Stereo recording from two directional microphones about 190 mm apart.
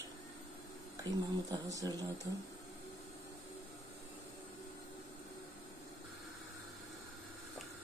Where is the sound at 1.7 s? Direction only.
20° right (ahead or behind).